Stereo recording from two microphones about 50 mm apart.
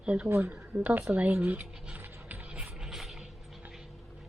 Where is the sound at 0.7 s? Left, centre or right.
Right.